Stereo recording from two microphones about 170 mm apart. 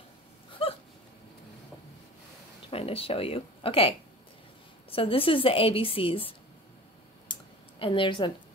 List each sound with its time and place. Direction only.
0.6 s a sound: 35° left (ahead or behind)
2.7 s a woman's voice: 35° left (ahead or behind)
4.9 s a woman's voice: 30° left (ahead or behind)
7.8 s a woman's voice: 30° left (ahead or behind)